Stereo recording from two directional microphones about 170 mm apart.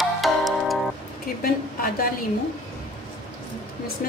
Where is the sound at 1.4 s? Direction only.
60° left (ahead or behind).